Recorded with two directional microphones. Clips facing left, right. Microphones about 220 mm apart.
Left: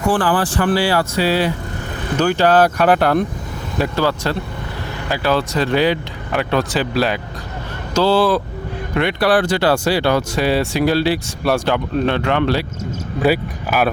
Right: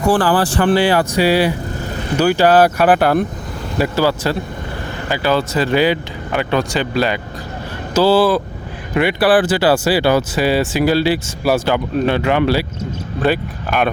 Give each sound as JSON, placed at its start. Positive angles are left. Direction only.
{"t": 0.1, "sound": "speech", "side_deg": -35}
{"t": 13.1, "sound": "speech", "side_deg": 10}